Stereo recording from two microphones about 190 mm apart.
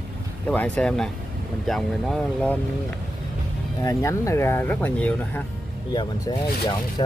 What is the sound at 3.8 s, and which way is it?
Speech, 15° left (ahead or behind).